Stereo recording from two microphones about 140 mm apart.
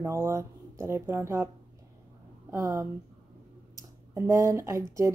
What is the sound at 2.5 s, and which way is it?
A woman's voice, 25° right (ahead or behind).